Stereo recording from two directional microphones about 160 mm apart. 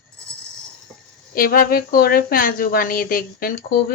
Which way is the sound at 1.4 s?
70° left (ahead or behind).